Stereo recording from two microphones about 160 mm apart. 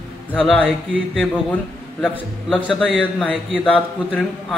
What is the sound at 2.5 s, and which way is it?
A man's voice, centre (ahead or behind).